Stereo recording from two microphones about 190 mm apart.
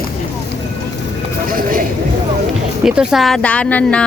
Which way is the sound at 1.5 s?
45° right (ahead or behind).